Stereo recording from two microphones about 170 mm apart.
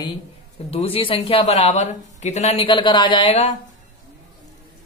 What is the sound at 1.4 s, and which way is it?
Speech, 40° left (ahead or behind).